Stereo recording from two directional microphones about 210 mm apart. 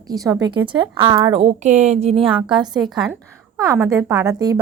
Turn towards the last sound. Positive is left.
turn(degrees=-15)  # may be behind; listen again after turning